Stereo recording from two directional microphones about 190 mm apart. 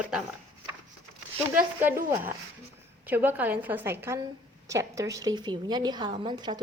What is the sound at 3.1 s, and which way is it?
A woman's voice, 10° right (ahead or behind).